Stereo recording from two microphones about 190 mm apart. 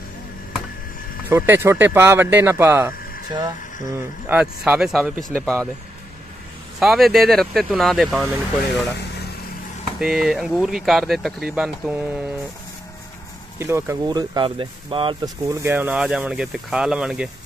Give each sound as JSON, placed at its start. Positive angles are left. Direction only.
{"t": 1.3, "sound": "speech", "side_deg": -10}
{"t": 6.8, "sound": "speech", "side_deg": 0}
{"t": 9.9, "sound": "speech", "side_deg": 0}
{"t": 13.6, "sound": "speech", "side_deg": -15}
{"t": 15.5, "sound": "speech", "side_deg": -10}